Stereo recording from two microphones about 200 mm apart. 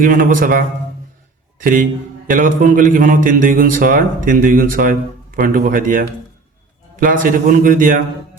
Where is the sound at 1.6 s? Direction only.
45° right (ahead or behind).